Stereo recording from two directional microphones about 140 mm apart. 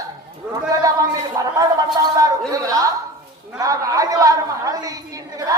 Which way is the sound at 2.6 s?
25° right (ahead or behind).